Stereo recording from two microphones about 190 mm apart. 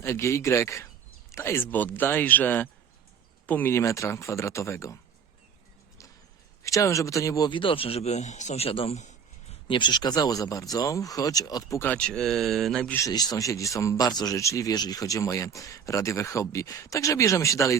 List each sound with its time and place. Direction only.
0.0 s speech: 15° left (ahead or behind)
6.6 s a man's voice: 15° left (ahead or behind); by 9.6 s 35° left (ahead or behind)
9.6 s speech: 25° left (ahead or behind); by 13.0 s centre (ahead or behind)
13.0 s speech: 20° left (ahead or behind)